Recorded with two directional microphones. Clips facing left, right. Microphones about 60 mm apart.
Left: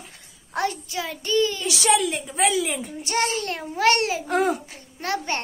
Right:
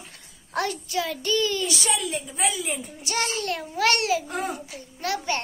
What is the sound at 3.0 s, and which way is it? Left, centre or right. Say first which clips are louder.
A child's voice: left 3 dB; left.